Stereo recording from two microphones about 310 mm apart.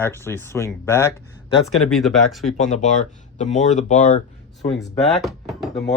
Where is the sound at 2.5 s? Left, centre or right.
Left.